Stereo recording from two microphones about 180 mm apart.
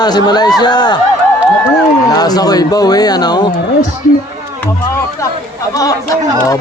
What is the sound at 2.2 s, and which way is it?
A man's voice, 20° left (ahead or behind).